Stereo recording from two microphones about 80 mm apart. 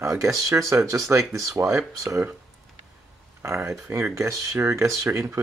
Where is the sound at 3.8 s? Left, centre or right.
Right.